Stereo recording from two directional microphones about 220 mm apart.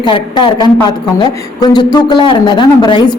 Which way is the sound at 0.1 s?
20° left (ahead or behind).